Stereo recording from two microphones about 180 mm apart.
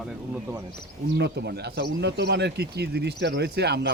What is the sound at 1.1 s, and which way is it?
Speech, 70° right (ahead or behind).